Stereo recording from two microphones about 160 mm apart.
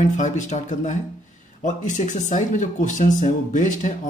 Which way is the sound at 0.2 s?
50° left (ahead or behind).